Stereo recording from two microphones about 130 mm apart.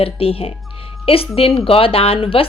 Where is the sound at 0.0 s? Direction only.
45° left (ahead or behind).